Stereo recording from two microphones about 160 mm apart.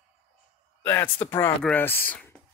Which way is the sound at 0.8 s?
15° left (ahead or behind).